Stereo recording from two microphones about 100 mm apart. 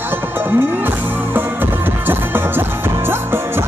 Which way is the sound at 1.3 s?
20° right (ahead or behind).